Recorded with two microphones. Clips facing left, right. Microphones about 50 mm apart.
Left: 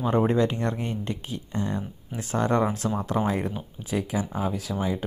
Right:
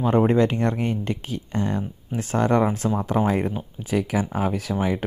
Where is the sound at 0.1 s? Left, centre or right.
Right.